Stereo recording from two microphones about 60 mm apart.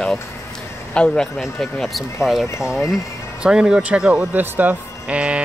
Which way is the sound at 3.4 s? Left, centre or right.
Centre.